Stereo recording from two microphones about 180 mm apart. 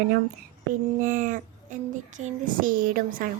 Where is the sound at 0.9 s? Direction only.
45° right (ahead or behind).